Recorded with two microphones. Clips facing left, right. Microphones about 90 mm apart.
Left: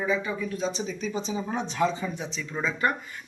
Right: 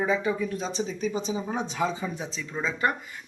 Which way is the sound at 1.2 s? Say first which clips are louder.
Even; 10° right (ahead or behind).